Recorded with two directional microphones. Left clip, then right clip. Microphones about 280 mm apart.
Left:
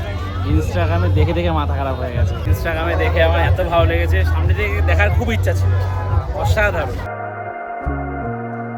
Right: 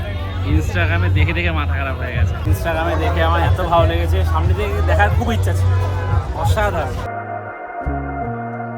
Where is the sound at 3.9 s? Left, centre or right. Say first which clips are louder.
Left 1 dB; centre.